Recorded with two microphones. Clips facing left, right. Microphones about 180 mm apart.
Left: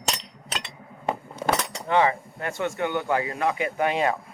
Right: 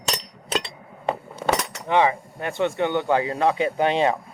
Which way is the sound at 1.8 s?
20° right (ahead or behind).